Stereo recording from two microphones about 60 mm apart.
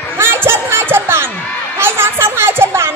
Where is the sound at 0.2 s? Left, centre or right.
Right.